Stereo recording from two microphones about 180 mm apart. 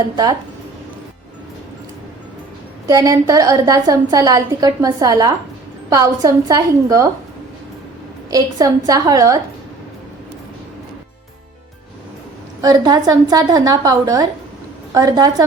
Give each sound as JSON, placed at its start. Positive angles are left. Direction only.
{"t": 2.8, "sound": "a woman's voice", "side_deg": -20}
{"t": 8.3, "sound": "a woman's voice", "side_deg": -20}
{"t": 12.6, "sound": "a woman's voice", "side_deg": -20}